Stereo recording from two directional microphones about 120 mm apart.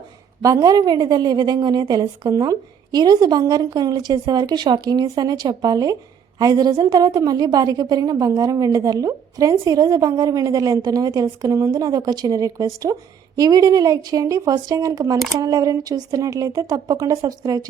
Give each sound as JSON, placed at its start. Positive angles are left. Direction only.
{"t": 0.4, "sound": "a woman's voice", "side_deg": -30}